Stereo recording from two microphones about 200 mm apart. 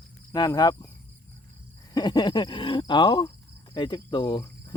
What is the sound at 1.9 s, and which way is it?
Speech, 20° left (ahead or behind).